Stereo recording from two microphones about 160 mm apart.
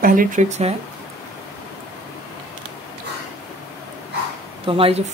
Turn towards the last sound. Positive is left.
turn(degrees=-35)  # may be behind; listen again after turning